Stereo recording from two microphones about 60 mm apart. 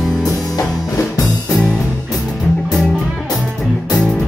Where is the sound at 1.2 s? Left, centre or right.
Left.